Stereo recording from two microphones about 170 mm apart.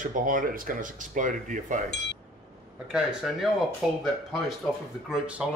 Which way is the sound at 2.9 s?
5° right (ahead or behind).